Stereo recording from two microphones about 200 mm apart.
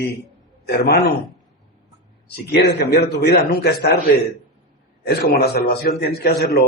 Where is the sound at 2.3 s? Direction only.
55° left (ahead or behind).